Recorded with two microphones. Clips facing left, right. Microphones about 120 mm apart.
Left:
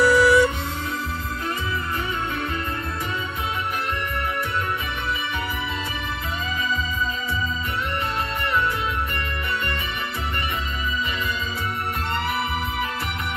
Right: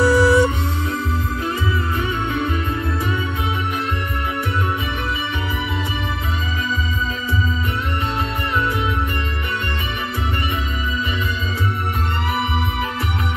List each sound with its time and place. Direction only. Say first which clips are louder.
0.0 s music: right 2 dB; 30° right (ahead or behind)